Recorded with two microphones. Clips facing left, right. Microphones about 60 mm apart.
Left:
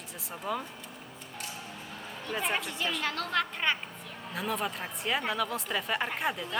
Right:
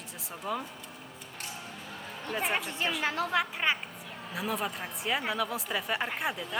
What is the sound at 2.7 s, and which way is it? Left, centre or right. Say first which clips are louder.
Speech: right 1 dB; right.